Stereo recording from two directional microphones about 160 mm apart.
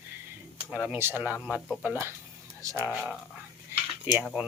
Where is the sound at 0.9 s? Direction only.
15° right (ahead or behind).